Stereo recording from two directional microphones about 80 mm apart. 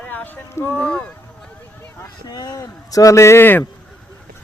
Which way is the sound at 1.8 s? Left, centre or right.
Left.